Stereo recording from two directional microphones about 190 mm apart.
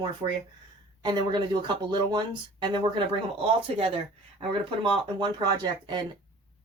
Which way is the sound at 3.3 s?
30° right (ahead or behind).